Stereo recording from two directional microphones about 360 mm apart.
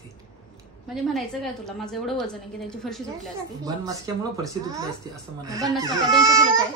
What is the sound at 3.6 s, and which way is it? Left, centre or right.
Speech, centre.